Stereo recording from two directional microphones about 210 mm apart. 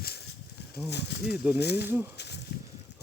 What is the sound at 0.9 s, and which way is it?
Speech, 55° left (ahead or behind).